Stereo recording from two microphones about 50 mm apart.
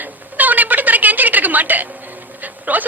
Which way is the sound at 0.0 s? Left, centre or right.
Right.